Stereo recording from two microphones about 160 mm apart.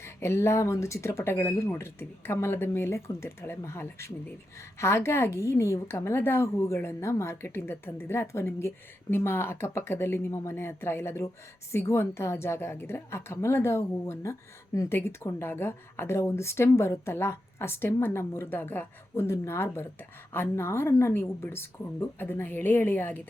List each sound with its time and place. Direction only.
0.0 s a woman's voice: 15° left (ahead or behind)